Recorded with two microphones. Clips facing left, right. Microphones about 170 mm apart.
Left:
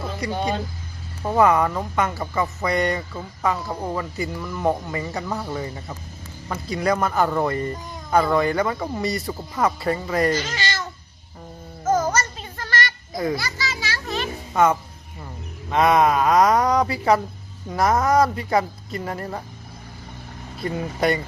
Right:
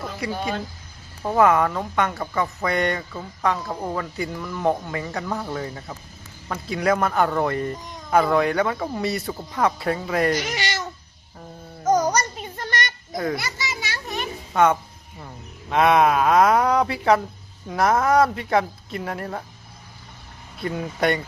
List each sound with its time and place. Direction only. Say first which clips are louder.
0.0 s vehicle: left 1 dB; 5° right (ahead or behind)
1.2 s speech: even; centre (ahead or behind)
10.3 s speech: even; 15° right (ahead or behind)
11.9 s a sound: right 1 dB; 15° right (ahead or behind)
13.3 s children playing: left 1 dB; 20° right (ahead or behind)
14.5 s speech: even; centre (ahead or behind)
20.6 s speech: even; centre (ahead or behind)